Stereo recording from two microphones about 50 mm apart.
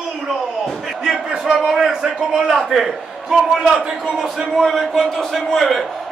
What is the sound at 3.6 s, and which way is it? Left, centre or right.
Speech, centre.